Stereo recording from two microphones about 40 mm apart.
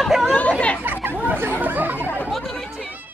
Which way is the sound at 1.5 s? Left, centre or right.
Right.